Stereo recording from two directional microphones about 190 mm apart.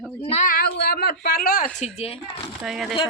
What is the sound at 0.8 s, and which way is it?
Speech, 55° left (ahead or behind).